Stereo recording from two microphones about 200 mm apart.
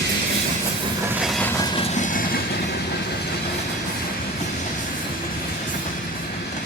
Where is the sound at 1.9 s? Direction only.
40° left (ahead or behind).